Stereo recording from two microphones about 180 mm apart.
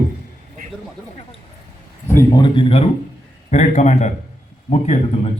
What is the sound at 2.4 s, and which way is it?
A man's voice, 30° left (ahead or behind).